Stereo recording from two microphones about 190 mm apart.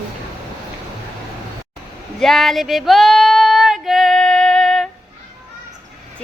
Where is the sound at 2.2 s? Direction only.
Centre (ahead or behind).